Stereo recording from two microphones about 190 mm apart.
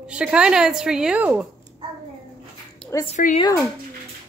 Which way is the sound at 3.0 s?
35° left (ahead or behind).